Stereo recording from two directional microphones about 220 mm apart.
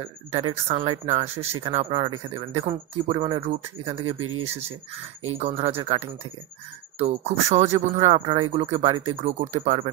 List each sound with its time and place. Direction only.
0.5 s speech: 25° right (ahead or behind)
4.0 s speech: 75° right (ahead or behind)
5.4 s speech: 30° right (ahead or behind)
7.0 s speech: 30° right (ahead or behind)